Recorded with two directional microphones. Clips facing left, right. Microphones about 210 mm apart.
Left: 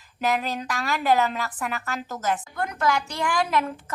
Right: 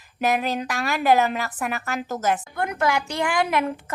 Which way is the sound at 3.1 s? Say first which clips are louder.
Right 2 dB; 60° right (ahead or behind).